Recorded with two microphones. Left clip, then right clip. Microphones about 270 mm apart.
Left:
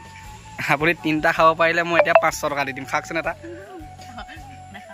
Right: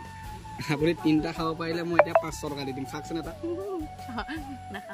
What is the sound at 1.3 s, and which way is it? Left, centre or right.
Speech, left.